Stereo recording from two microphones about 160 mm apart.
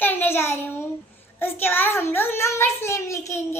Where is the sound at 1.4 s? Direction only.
15° left (ahead or behind).